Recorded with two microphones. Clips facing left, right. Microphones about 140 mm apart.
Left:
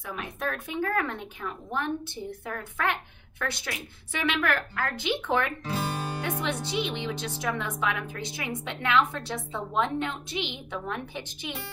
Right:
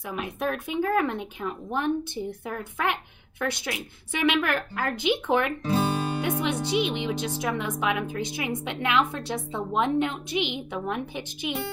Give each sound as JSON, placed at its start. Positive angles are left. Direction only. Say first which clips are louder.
{"t": 0.0, "sound": "speech", "louder": "right 4 dB", "side_deg": -15}